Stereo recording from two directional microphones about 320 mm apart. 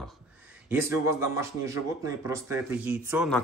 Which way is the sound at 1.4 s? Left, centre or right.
Centre.